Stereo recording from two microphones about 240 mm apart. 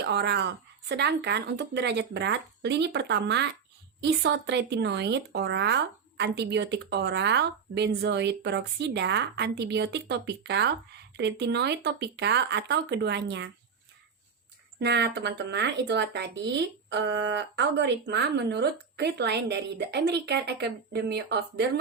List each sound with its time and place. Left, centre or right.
0.0 s speech: right
14.8 s speech: right